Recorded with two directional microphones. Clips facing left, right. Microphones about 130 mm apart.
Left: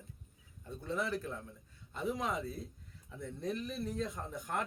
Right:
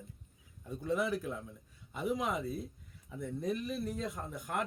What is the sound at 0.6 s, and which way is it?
Speech, 5° right (ahead or behind).